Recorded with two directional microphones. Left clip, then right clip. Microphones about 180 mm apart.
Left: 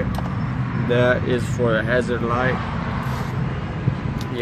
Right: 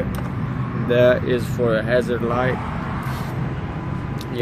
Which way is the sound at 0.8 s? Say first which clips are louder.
Right 3 dB; 20° right (ahead or behind).